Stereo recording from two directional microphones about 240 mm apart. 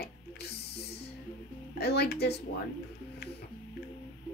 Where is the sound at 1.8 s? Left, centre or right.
Left.